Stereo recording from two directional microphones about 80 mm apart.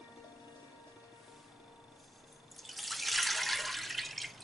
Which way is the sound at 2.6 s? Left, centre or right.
Centre.